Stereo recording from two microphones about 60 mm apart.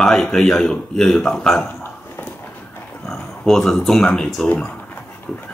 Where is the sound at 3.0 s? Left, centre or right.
Centre.